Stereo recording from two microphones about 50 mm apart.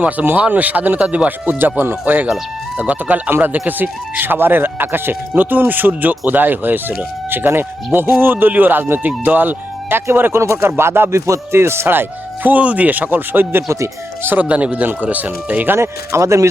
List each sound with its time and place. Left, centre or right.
0.3 s speech: right
1.5 s speech: right
2.7 s speech: right
3.3 s speech: right
10.1 s speech: right
10.4 s speech: right
10.7 s speech: right
11.1 s speech: right
13.7 s speech: right
14.3 s speech: right
15.7 s speech: right